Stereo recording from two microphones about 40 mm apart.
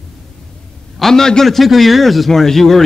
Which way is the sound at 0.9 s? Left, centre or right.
Centre.